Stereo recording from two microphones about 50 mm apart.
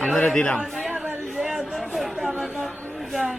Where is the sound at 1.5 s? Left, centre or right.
Centre.